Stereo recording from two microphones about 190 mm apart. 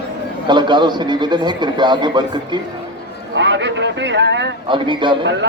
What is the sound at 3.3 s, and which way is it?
Speech, 70° right (ahead or behind).